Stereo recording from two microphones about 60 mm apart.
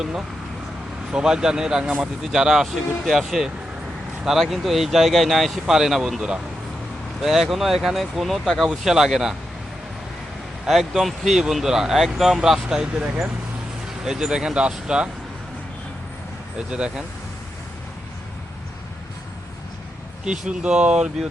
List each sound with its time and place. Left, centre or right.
0.0 s speech: centre
10.7 s speech: centre
16.6 s speech: centre
20.2 s speech: centre